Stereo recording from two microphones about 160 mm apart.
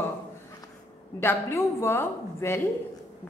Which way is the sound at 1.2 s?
15° left (ahead or behind).